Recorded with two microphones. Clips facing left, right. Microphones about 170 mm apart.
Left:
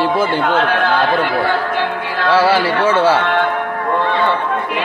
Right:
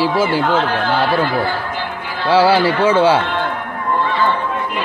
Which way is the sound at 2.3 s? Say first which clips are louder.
Right 1 dB; 30° right (ahead or behind).